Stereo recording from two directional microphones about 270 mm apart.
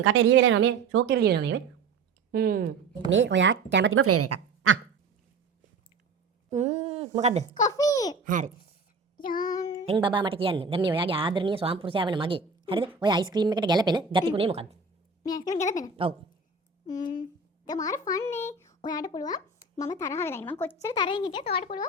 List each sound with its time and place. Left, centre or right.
0.0 s a woman's voice: right
6.5 s speech: right
7.6 s a child's voice: centre
8.2 s speech: right
9.1 s child singing: left
9.4 s child singing: centre
9.8 s a woman's voice: centre
15.2 s a woman's voice: centre
16.0 s speech: centre
16.8 s a child's voice: centre